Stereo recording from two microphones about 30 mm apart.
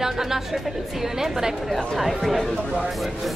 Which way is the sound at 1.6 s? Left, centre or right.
Centre.